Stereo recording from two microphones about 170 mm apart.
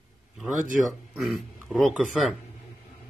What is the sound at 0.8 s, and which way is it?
Speech, centre (ahead or behind).